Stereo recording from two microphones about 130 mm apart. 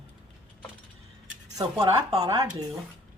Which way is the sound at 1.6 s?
30° right (ahead or behind).